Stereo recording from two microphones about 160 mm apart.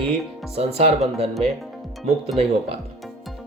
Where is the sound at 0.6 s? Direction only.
40° right (ahead or behind).